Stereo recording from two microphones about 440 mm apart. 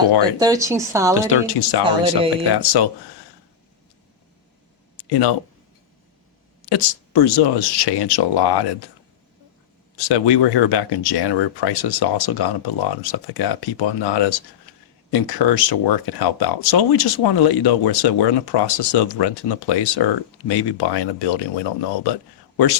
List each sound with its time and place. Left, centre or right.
0.2 s speech: centre
1.3 s speech: left
1.8 s speech: centre
2.6 s speech: left
4.9 s a sound: left
6.7 s speech: left
10.0 s speech: left
22.5 s speech: left